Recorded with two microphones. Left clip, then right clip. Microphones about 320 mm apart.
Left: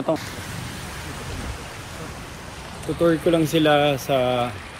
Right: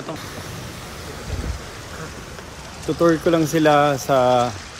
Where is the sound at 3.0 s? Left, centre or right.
Centre.